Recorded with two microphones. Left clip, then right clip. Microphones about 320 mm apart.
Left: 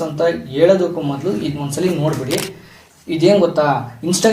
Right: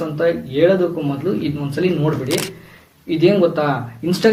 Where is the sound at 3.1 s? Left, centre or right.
Left.